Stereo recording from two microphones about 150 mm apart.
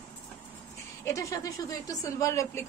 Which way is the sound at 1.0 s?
20° left (ahead or behind).